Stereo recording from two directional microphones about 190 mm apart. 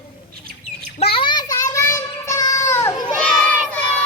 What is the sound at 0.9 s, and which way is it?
Child singing, 30° left (ahead or behind).